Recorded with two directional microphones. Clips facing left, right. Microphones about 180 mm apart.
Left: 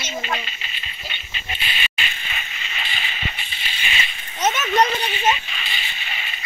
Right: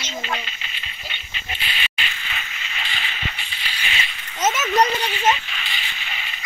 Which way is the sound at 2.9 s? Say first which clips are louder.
Even; 20° left (ahead or behind).